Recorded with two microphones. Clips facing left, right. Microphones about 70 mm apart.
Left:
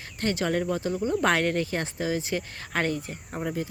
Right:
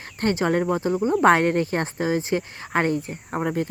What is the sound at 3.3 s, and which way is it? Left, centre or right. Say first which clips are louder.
Speech: right 6 dB; right.